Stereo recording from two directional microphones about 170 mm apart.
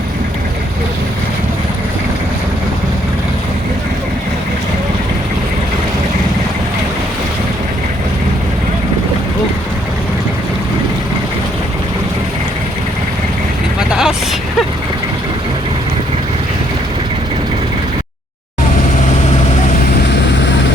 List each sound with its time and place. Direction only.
13.7 s vehicle: 5° right (ahead or behind)